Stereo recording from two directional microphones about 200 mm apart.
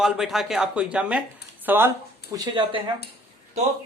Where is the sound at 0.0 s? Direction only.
Centre (ahead or behind).